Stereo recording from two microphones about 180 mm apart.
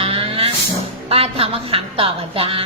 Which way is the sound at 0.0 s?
30° right (ahead or behind).